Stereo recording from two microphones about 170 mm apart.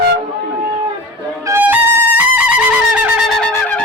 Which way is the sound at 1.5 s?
10° right (ahead or behind).